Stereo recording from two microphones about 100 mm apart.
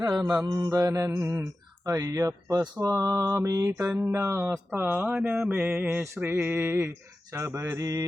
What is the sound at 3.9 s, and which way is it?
Mantra, 20° right (ahead or behind).